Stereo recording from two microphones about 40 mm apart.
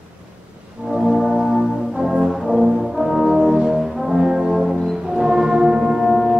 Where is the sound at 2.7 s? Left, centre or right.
Centre.